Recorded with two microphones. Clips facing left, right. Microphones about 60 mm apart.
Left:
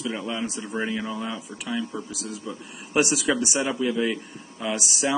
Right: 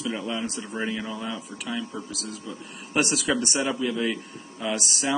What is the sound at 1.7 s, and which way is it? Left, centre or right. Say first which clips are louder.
A man's voice: left 3 dB; centre.